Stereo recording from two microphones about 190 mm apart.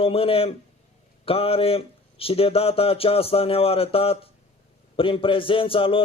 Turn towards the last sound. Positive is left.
turn(degrees=30)  # may be behind; listen again after turning